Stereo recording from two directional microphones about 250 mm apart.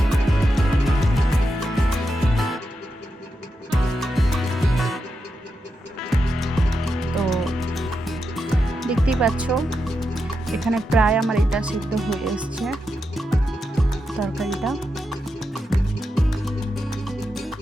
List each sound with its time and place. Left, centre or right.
0.1 s music: centre
4.0 s music: centre
6.0 s music: centre
14.2 s music: centre